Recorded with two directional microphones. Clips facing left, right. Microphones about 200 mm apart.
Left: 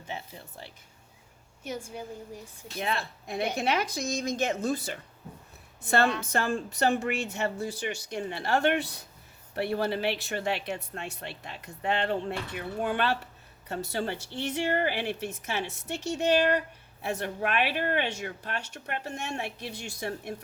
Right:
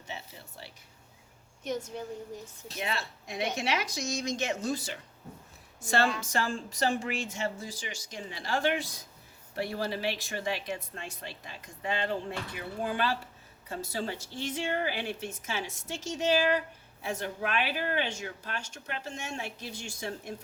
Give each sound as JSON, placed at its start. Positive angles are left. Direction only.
{"t": 1.9, "sound": "speech", "side_deg": 10}
{"t": 2.8, "sound": "a woman's voice", "side_deg": 55}